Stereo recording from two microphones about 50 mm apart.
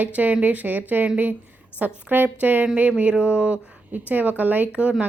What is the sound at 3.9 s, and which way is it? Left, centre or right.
A woman's voice, right.